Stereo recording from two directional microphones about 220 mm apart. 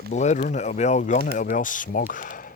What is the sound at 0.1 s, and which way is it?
Speech, 30° left (ahead or behind).